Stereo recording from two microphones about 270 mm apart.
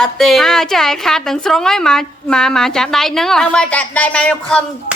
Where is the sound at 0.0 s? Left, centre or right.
Centre.